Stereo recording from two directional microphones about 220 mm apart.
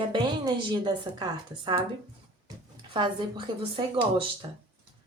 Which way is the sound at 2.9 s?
20° right (ahead or behind).